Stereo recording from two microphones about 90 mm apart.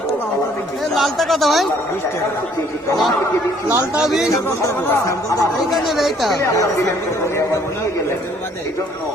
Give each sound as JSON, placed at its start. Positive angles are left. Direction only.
{"t": 0.9, "sound": "speech", "side_deg": 0}
{"t": 3.9, "sound": "speech", "side_deg": -5}
{"t": 4.3, "sound": "speech", "side_deg": 35}
{"t": 5.7, "sound": "speech", "side_deg": 0}